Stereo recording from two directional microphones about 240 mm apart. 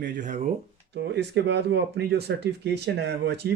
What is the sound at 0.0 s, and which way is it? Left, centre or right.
Speech, right.